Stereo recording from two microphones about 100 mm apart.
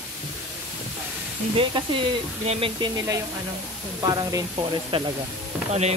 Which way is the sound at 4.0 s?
40° right (ahead or behind).